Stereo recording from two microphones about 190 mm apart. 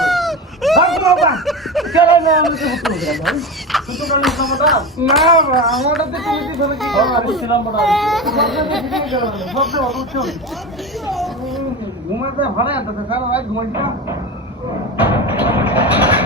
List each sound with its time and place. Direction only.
0.0 s a sound: centre (ahead or behind)
2.0 s speech: centre (ahead or behind)
15.0 s music: 10° right (ahead or behind)